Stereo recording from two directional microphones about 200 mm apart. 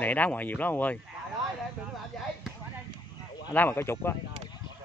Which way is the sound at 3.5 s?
10° left (ahead or behind).